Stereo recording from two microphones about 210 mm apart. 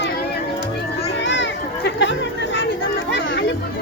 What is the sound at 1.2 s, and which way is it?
Children playing, 60° left (ahead or behind).